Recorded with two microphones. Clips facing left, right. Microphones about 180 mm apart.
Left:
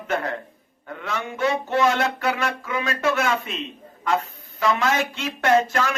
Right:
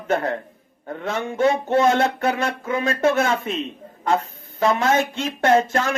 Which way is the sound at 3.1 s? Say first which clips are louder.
Right 3 dB; 25° right (ahead or behind).